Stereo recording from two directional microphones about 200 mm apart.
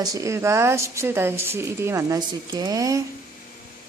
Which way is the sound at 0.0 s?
15° right (ahead or behind).